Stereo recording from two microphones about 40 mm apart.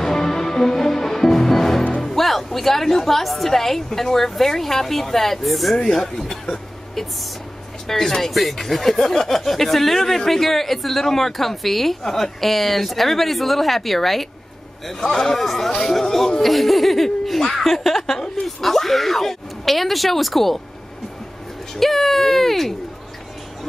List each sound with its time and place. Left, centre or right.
0.0 s music: centre
2.2 s speech: centre
5.8 s a woman's voice: centre
18.6 s speech: centre
21.7 s speech: centre